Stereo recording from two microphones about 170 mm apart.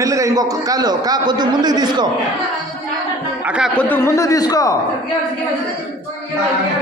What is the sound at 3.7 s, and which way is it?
A man's voice, 10° left (ahead or behind).